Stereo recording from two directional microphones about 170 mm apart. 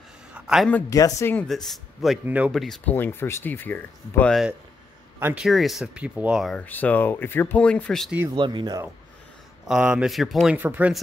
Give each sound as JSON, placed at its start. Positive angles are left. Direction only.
{"t": 0.3, "sound": "a sound", "side_deg": -5}
{"t": 0.7, "sound": "speech", "side_deg": 10}
{"t": 1.5, "sound": "speech", "side_deg": 0}
{"t": 5.2, "sound": "speech", "side_deg": -5}
{"t": 6.6, "sound": "speech", "side_deg": 10}
{"t": 8.4, "sound": "speech", "side_deg": -25}
{"t": 9.7, "sound": "speech", "side_deg": -5}